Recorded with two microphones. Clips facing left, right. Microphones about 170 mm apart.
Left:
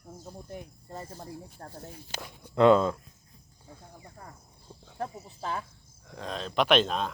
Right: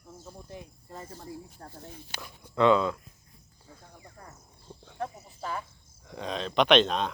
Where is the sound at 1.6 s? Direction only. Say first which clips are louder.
Left 2 dB; 45° left (ahead or behind).